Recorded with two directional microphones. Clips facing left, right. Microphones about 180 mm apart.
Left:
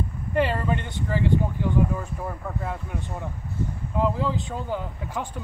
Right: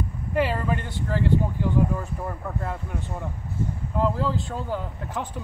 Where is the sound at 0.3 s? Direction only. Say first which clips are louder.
Left 1 dB; 5° right (ahead or behind).